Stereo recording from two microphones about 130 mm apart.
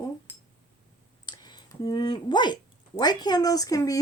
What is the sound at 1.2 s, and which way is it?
Speech, 35° left (ahead or behind).